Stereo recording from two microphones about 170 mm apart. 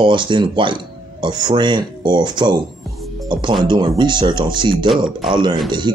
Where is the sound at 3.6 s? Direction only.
25° right (ahead or behind).